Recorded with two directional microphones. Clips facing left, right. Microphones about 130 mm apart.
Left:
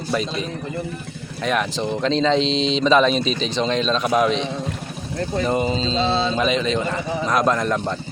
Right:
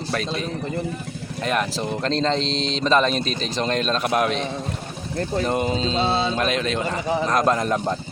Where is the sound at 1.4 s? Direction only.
Centre (ahead or behind).